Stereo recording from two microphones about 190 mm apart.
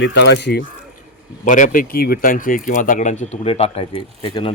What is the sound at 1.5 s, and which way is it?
A man's voice, 45° left (ahead or behind).